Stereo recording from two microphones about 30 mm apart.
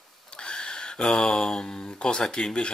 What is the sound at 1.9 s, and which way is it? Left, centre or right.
Speech, left.